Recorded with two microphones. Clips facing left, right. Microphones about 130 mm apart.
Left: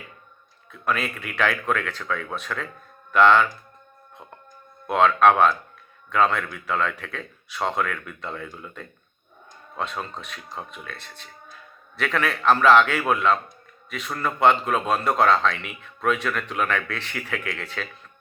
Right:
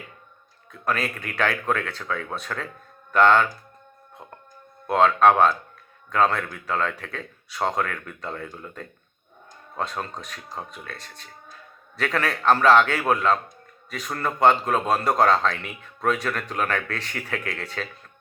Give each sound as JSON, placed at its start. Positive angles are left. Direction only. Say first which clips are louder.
{"t": 0.7, "sound": "speech", "louder": "even", "side_deg": -40}
{"t": 4.9, "sound": "speech", "louder": "even", "side_deg": -35}